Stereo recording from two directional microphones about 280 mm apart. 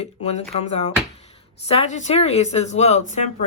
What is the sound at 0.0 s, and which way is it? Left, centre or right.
Speech, left.